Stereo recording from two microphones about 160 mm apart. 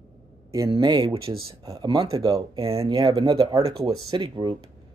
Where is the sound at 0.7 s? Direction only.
30° right (ahead or behind).